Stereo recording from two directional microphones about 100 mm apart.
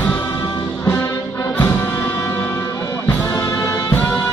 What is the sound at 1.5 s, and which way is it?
Music, 20° left (ahead or behind).